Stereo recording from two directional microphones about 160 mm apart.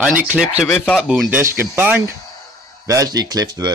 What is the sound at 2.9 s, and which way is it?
Speech, 25° right (ahead or behind).